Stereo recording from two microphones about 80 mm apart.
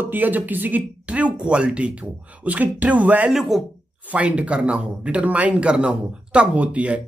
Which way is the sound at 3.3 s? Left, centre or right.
Centre.